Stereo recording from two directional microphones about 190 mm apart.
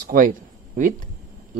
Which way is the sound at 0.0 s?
45° right (ahead or behind).